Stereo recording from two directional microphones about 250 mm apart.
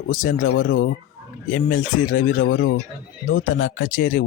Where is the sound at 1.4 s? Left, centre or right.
Left.